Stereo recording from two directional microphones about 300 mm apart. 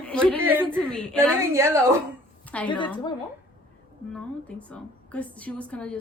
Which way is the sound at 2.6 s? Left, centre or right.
Centre.